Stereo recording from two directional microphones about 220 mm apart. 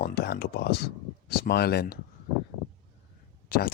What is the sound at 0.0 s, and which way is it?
Speech, 45° left (ahead or behind).